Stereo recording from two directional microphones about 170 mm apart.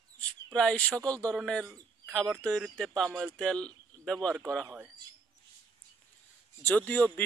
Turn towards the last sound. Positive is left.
turn(degrees=10)  # may be behind; listen again after turning